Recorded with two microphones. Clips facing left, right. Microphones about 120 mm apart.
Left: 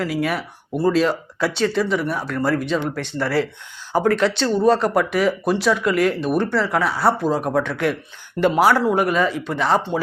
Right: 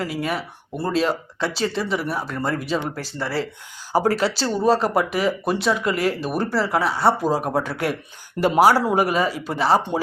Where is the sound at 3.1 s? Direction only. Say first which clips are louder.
Left 5 dB; 25° right (ahead or behind).